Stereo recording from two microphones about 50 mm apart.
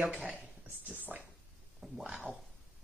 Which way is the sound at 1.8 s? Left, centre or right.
Centre.